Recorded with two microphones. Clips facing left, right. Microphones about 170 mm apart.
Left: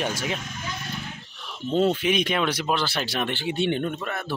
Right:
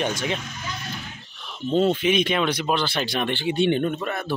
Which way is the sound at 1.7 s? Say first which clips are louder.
Right 2 dB; 5° left (ahead or behind).